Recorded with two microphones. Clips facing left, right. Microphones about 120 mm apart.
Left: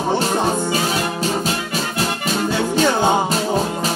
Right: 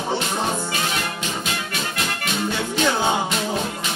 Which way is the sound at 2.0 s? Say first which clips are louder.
Left 5 dB; 35° left (ahead or behind).